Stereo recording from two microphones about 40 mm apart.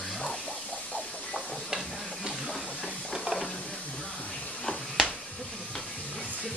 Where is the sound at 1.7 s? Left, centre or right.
Right.